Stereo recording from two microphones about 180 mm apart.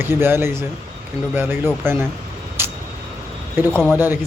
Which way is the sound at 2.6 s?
10° right (ahead or behind).